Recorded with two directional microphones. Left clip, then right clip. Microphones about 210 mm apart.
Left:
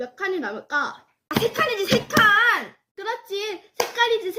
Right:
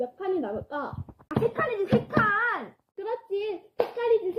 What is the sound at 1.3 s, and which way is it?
Speech, 35° left (ahead or behind).